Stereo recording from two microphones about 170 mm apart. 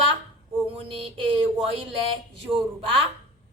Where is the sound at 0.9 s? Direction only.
30° right (ahead or behind).